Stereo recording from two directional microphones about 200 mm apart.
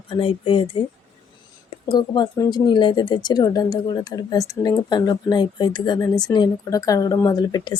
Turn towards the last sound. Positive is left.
turn(degrees=20)  # may be behind; listen again after turning